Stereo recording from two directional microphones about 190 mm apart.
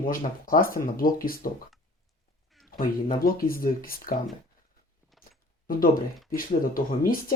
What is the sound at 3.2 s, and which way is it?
Speech, 50° left (ahead or behind).